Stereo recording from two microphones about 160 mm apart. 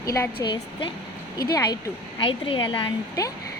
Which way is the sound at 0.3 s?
30° left (ahead or behind).